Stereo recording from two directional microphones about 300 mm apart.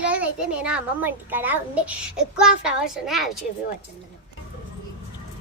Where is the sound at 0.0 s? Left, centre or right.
Centre.